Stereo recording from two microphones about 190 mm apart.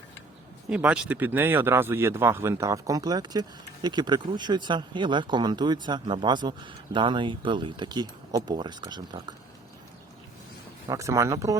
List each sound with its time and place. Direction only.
0.7 s speech: 5° right (ahead or behind); by 9.2 s 20° right (ahead or behind)
10.8 s speech: 15° right (ahead or behind)